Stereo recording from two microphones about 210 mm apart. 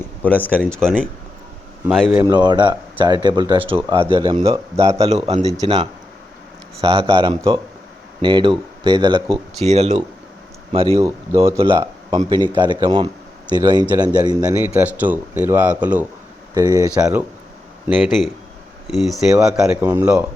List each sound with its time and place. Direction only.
0.2 s speech: 10° left (ahead or behind)
2.2 s speech: 20° right (ahead or behind)
4.9 s speech: 30° right (ahead or behind)
11.6 s speech: 20° right (ahead or behind)
14.6 s speech: 10° right (ahead or behind)
17.8 s speech: centre (ahead or behind)